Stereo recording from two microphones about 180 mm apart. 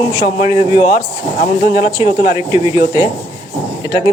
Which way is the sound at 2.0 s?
20° right (ahead or behind).